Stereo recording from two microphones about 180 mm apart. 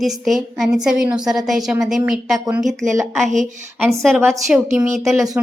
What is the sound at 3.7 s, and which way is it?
A woman's voice, 15° right (ahead or behind).